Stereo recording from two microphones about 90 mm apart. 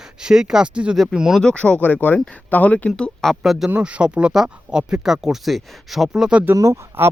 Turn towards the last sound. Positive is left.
turn(degrees=-30)  # may be behind; listen again after turning